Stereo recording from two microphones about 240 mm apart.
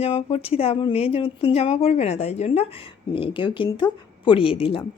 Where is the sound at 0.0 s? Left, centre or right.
Left.